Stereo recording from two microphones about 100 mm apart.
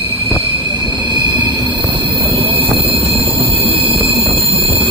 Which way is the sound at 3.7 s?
65° right (ahead or behind).